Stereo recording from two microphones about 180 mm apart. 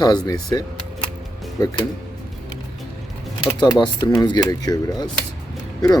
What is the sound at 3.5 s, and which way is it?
Speech, 20° left (ahead or behind).